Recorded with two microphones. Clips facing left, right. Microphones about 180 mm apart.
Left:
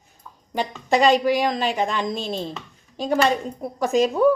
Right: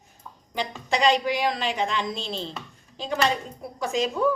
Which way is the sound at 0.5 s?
45° left (ahead or behind).